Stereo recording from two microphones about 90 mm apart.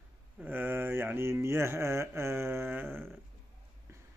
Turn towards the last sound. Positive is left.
turn(degrees=-20)  # may be behind; listen again after turning